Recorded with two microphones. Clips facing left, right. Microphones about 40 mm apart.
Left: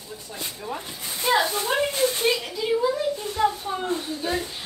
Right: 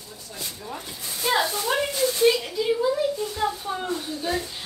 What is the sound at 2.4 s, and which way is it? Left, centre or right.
A child's voice, centre.